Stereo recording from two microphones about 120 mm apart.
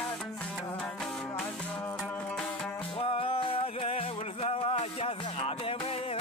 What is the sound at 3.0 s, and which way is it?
Music, 50° left (ahead or behind).